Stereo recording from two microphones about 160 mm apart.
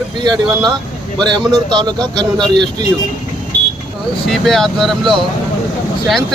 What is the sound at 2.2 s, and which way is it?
Speech, 5° left (ahead or behind).